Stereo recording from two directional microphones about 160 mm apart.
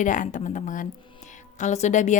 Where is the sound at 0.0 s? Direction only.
55° left (ahead or behind).